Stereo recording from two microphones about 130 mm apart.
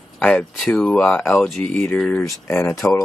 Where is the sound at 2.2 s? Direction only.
20° left (ahead or behind).